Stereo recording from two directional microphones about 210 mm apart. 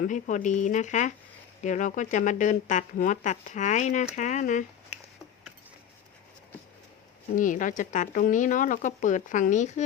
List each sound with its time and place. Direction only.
0.0 s speech: 35° left (ahead or behind)
7.3 s speech: 40° left (ahead or behind)